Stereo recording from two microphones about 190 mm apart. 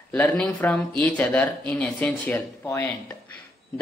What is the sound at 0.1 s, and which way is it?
Speech, 5° left (ahead or behind).